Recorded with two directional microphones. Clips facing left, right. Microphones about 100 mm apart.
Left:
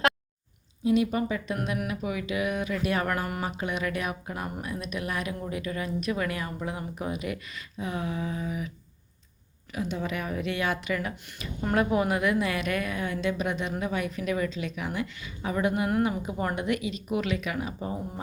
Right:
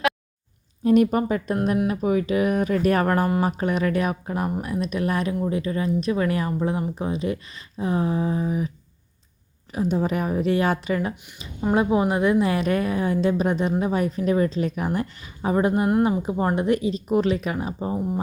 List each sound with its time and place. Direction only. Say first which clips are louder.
0.9 s speech: right 6 dB; 45° right (ahead or behind)
9.7 s speech: right 8 dB; 35° right (ahead or behind)
11.1 s a woman's voice: even; 20° right (ahead or behind)
15.9 s a woman's voice: right 6 dB; 20° right (ahead or behind)